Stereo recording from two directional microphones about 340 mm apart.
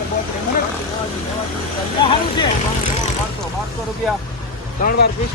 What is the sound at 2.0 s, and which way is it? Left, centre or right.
Speech, centre.